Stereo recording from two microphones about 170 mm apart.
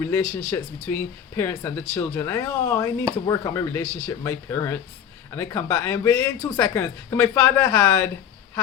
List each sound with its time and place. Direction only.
0.0 s speech: 15° left (ahead or behind)